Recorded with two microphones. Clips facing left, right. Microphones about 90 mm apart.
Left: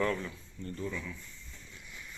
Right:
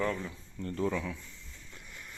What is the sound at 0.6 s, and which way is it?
Speech, 70° right (ahead or behind).